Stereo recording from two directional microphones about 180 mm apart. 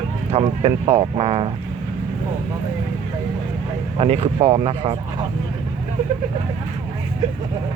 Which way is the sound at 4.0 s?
35° right (ahead or behind).